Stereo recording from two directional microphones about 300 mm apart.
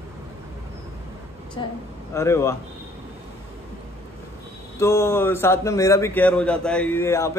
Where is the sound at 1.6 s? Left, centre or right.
Centre.